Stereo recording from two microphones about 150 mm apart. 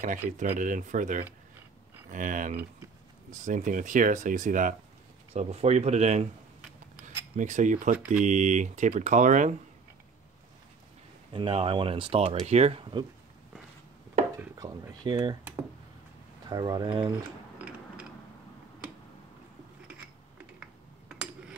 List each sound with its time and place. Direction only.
0.0 s speech: 60° right (ahead or behind)
5.3 s speech: 45° right (ahead or behind)
7.3 s speech: 55° right (ahead or behind)
11.3 s speech: 40° right (ahead or behind)
14.6 s a sound: 25° right (ahead or behind)
16.4 s speech: 25° right (ahead or behind)
17.6 s mechanisms: 10° right (ahead or behind)